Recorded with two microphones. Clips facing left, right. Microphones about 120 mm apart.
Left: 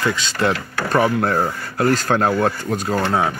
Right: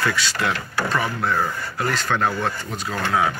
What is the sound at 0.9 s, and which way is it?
Speech, 45° left (ahead or behind).